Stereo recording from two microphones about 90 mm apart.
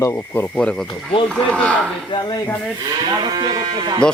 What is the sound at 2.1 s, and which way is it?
Speech, 60° left (ahead or behind).